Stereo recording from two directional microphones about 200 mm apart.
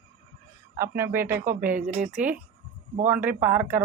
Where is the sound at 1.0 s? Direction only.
10° right (ahead or behind).